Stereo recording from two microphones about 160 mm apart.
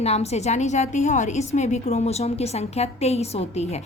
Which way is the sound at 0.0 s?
40° left (ahead or behind).